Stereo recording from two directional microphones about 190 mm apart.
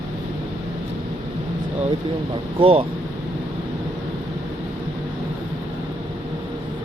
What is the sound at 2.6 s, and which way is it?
Speech, 30° right (ahead or behind).